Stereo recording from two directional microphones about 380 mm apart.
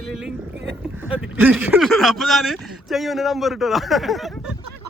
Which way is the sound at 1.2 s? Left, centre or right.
Centre.